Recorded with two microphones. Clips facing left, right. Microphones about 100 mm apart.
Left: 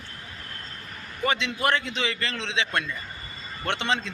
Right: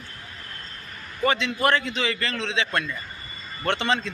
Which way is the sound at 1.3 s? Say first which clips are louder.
Right 3 dB; 20° left (ahead or behind).